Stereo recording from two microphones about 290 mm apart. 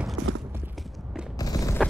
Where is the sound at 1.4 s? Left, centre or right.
Centre.